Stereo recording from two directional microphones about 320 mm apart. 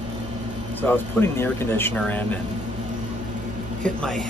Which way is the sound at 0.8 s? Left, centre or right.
Centre.